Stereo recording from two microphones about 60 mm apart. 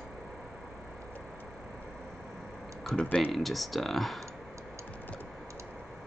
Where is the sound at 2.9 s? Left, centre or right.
Centre.